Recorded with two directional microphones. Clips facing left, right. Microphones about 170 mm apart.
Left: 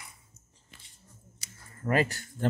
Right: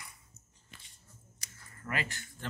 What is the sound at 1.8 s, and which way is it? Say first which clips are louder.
Speech: left 11 dB; 40° left (ahead or behind).